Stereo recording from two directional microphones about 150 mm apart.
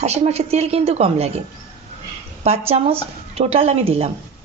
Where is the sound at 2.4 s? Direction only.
45° right (ahead or behind).